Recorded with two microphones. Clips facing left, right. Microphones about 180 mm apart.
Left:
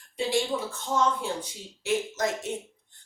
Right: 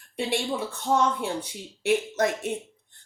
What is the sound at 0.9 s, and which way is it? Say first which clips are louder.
Speech: right 1 dB; 60° right (ahead or behind).